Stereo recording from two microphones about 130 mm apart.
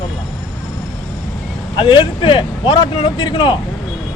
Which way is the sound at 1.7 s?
40° left (ahead or behind).